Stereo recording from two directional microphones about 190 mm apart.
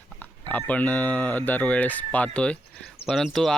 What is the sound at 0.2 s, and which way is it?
Speech, 10° left (ahead or behind).